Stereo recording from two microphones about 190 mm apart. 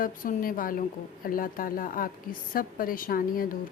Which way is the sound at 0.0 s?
45° left (ahead or behind).